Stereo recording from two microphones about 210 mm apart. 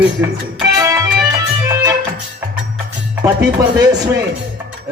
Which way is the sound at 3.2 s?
15° right (ahead or behind).